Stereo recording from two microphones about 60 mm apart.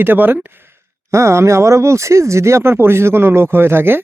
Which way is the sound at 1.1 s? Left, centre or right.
Right.